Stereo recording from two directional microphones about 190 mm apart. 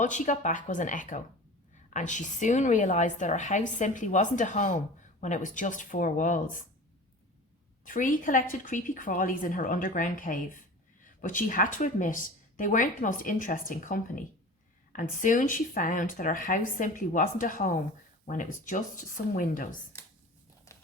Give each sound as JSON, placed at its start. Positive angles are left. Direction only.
{"t": 0.0, "sound": "a woman's voice", "side_deg": 40}
{"t": 7.9, "sound": "speech", "side_deg": 45}